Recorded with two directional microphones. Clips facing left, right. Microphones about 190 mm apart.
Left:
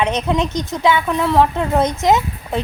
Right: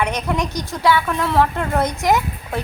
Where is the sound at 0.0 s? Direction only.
20° left (ahead or behind).